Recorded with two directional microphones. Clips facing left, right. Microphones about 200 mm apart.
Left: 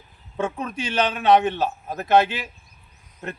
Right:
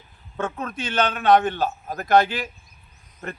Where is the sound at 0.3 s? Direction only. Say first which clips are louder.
Left 2 dB; 10° left (ahead or behind).